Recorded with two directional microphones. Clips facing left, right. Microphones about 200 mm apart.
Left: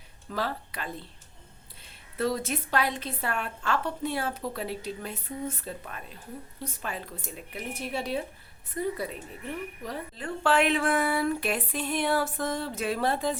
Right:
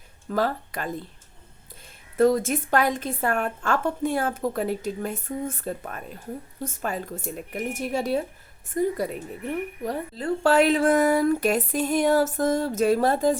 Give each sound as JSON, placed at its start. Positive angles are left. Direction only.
{"t": 0.3, "sound": "a woman's voice", "side_deg": -45}
{"t": 2.1, "sound": "a woman's voice", "side_deg": -45}